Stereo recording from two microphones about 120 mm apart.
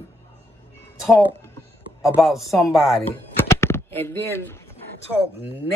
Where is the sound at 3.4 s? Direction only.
20° left (ahead or behind).